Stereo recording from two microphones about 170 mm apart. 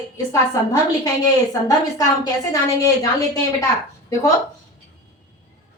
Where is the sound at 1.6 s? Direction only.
20° left (ahead or behind).